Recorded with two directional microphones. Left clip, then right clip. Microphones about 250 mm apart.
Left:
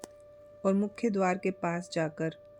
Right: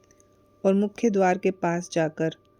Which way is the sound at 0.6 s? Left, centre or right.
Right.